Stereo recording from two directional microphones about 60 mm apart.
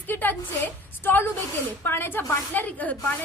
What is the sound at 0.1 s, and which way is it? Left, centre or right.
A woman's voice, left.